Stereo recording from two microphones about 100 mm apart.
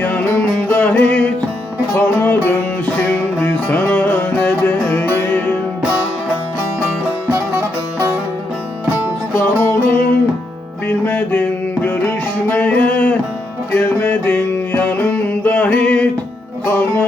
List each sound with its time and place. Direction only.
0.0 s music: 15° left (ahead or behind)
7.3 s music: 20° right (ahead or behind)
9.3 s music: 25° left (ahead or behind)